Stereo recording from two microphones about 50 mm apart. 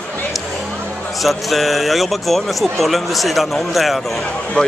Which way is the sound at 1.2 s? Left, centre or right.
Centre.